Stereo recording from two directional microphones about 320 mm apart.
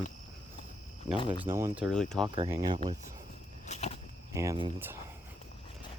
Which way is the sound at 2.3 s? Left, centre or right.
Centre.